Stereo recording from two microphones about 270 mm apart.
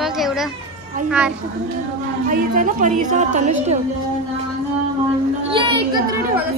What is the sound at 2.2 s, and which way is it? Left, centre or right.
A woman's voice, right.